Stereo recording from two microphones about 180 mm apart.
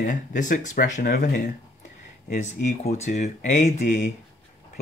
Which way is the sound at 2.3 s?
40° left (ahead or behind).